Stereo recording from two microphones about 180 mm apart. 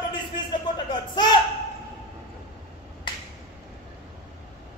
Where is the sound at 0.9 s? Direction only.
25° left (ahead or behind).